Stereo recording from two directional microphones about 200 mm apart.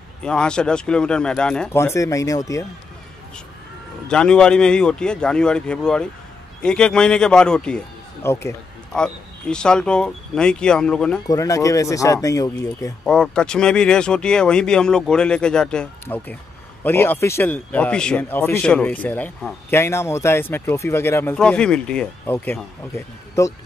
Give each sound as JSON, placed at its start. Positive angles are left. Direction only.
{"t": 0.2, "sound": "speech", "side_deg": 5}
{"t": 4.1, "sound": "speech", "side_deg": 5}
{"t": 11.2, "sound": "speech", "side_deg": 15}
{"t": 13.0, "sound": "speech", "side_deg": 5}